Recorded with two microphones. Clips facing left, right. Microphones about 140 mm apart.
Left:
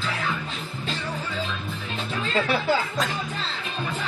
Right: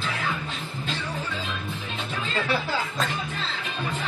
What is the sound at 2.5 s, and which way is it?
Speech, centre (ahead or behind).